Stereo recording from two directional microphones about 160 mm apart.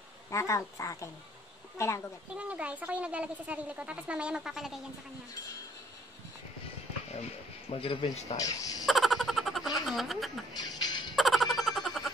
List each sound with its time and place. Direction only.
0.3 s speech: 20° left (ahead or behind)
2.3 s speech: 10° right (ahead or behind)
7.7 s speech: 35° left (ahead or behind)
8.8 s a sound: centre (ahead or behind)
9.8 s speech: centre (ahead or behind)
10.6 s music: 25° left (ahead or behind)
11.1 s a sound: centre (ahead or behind)